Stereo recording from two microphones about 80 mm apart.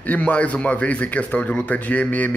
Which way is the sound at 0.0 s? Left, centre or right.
Centre.